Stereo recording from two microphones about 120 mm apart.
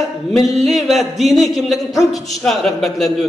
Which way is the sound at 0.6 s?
Centre (ahead or behind).